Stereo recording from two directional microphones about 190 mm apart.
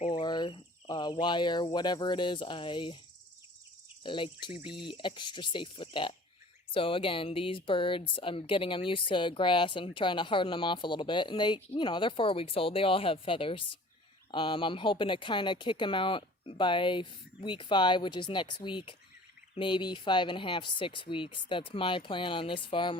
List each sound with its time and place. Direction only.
0.1 s speech: 20° left (ahead or behind)
4.0 s speech: 25° left (ahead or behind)